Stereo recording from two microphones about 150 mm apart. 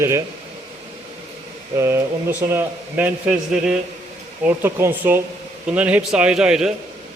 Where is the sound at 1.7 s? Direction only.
15° right (ahead or behind).